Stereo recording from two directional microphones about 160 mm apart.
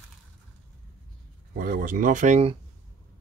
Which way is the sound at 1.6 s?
65° right (ahead or behind).